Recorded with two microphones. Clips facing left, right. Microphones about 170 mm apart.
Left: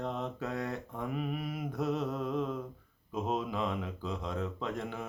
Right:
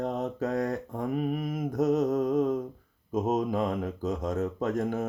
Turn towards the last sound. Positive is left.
turn(degrees=-45)  # may be behind; listen again after turning